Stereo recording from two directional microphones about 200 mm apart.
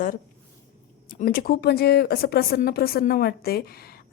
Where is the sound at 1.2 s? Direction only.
50° left (ahead or behind).